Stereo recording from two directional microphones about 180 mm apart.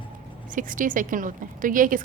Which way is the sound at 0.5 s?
50° right (ahead or behind).